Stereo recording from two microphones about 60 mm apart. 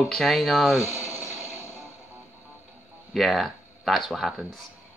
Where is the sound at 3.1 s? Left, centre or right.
Centre.